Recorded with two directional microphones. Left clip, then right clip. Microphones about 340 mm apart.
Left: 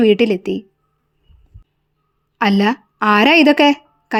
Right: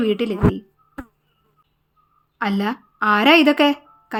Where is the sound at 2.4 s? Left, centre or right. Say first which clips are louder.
Left 7 dB; centre.